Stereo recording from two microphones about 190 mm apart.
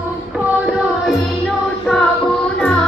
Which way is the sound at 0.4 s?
5° right (ahead or behind).